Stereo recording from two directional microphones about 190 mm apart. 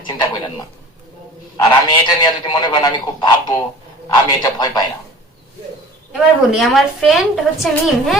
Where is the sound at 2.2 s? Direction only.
25° left (ahead or behind).